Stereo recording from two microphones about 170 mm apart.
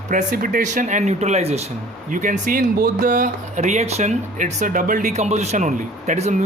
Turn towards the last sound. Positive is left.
turn(degrees=-45)  # may be behind; listen again after turning